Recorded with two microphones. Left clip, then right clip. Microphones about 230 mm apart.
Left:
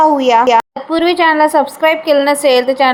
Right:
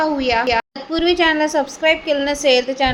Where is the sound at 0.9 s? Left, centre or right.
Centre.